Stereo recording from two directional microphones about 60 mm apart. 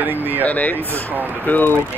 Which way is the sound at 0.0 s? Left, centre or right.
Right.